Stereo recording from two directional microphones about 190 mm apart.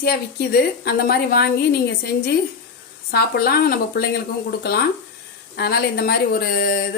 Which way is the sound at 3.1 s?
55° left (ahead or behind).